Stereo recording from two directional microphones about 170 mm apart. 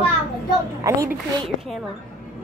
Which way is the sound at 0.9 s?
20° right (ahead or behind).